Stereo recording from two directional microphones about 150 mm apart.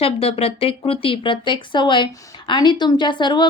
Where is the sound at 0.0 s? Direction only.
40° left (ahead or behind).